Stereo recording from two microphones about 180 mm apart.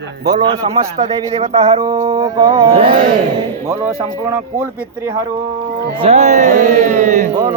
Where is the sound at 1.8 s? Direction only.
15° right (ahead or behind).